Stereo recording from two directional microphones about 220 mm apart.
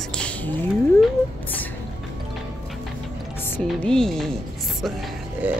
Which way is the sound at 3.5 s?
5° left (ahead or behind).